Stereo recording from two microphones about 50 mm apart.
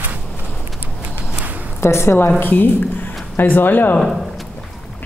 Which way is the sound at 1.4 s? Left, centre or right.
Right.